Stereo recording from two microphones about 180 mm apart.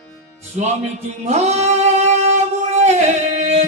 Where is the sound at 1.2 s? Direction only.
40° right (ahead or behind).